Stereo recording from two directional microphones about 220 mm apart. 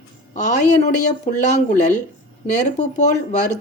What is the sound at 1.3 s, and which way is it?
A woman's voice, 35° left (ahead or behind).